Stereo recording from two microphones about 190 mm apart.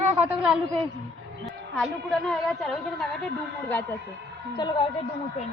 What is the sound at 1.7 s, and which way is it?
A woman's voice, centre (ahead or behind).